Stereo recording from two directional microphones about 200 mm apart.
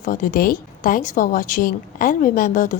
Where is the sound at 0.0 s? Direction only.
45° left (ahead or behind).